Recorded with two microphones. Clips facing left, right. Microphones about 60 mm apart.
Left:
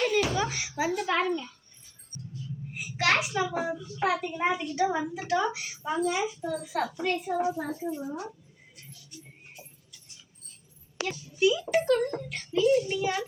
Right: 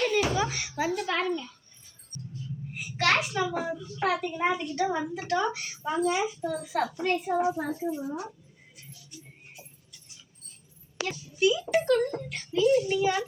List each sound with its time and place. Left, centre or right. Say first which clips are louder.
0.0 s a sound: even; centre
1.2 s a child's voice: left 1 dB; centre
2.1 s music: right 1 dB; left
2.7 s a child's voice: even; centre
7.0 s a child's voice: right 2 dB; right
7.7 s a woman's voice: right 2 dB; centre
11.3 s a child's voice: even; centre